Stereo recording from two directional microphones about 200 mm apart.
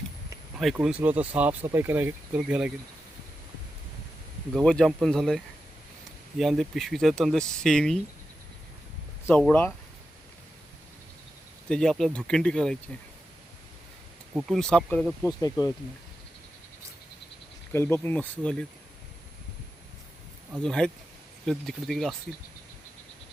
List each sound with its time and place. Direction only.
0.5 s speech: centre (ahead or behind)
4.5 s speech: 5° left (ahead or behind)
6.4 s speech: centre (ahead or behind)
9.2 s speech: 10° left (ahead or behind)
11.7 s speech: 5° left (ahead or behind)
14.3 s speech: centre (ahead or behind)
15.4 s speech: 20° left (ahead or behind)
17.7 s speech: 10° left (ahead or behind)
20.7 s speech: 5° left (ahead or behind)